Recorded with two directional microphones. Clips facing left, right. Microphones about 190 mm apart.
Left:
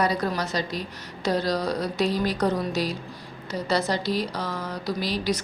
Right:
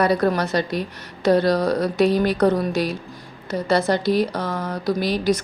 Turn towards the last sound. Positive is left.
turn(degrees=-50)  # may be behind; listen again after turning